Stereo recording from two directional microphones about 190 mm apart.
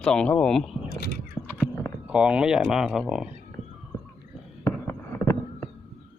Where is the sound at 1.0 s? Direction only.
55° left (ahead or behind).